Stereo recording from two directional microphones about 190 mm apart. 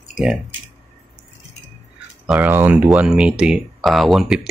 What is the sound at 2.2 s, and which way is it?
Speech, 5° right (ahead or behind).